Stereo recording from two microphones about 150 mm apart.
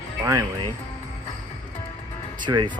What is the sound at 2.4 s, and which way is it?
Speech, 30° right (ahead or behind).